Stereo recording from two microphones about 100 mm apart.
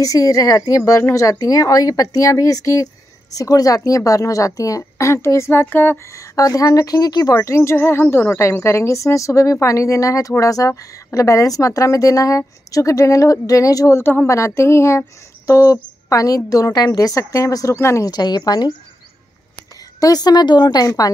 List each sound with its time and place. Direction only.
0.0 s a woman's voice: 35° left (ahead or behind)
6.3 s a woman's voice: 35° left (ahead or behind)
7.3 s a woman's voice: 30° left (ahead or behind)
18.1 s speech: 45° left (ahead or behind)
20.0 s a woman's voice: 40° left (ahead or behind)